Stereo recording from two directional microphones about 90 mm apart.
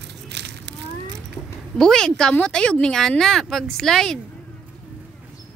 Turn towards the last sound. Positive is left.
turn(degrees=5)  # may be behind; listen again after turning